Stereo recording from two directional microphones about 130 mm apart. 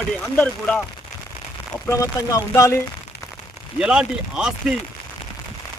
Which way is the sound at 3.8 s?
5° right (ahead or behind).